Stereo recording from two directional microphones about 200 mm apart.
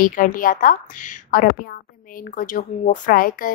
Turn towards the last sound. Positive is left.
turn(degrees=45)  # may be behind; listen again after turning